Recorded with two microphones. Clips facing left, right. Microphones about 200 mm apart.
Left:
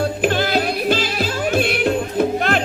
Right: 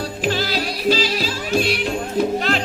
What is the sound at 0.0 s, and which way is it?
Music, 55° left (ahead or behind).